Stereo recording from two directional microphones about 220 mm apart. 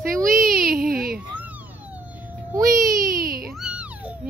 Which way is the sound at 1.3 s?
5° right (ahead or behind).